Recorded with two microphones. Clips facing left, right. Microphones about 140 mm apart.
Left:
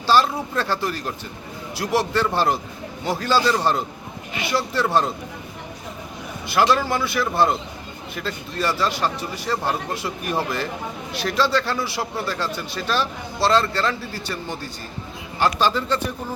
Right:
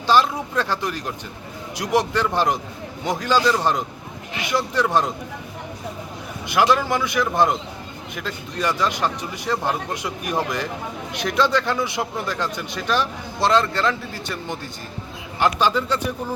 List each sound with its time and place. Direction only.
0.1 s speech: 15° right (ahead or behind)
4.7 s speech: 15° right (ahead or behind)
6.5 s speech: 15° right (ahead or behind)